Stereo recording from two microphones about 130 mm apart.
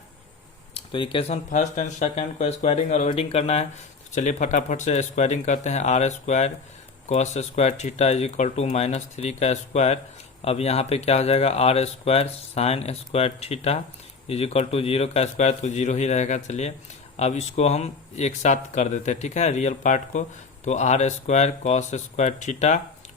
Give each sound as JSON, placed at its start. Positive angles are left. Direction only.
{"t": 0.7, "sound": "speech", "side_deg": 40}
{"t": 1.5, "sound": "speech", "side_deg": 70}
{"t": 3.1, "sound": "speech", "side_deg": 50}
{"t": 4.1, "sound": "speech", "side_deg": 70}